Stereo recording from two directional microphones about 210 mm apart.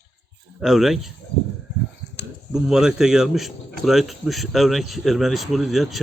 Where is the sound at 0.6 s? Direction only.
Centre (ahead or behind).